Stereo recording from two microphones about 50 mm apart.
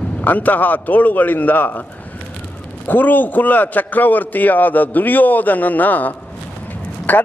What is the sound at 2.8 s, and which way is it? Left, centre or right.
Speech, left.